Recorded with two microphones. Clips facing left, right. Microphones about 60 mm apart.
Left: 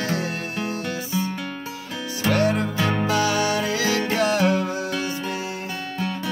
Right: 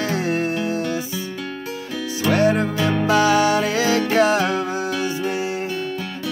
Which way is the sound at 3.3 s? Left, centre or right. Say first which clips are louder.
Right 5 dB; right.